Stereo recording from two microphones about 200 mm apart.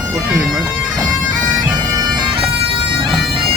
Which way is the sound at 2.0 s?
25° right (ahead or behind).